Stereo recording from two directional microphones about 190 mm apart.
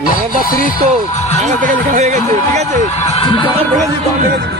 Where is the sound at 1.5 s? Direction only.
40° right (ahead or behind).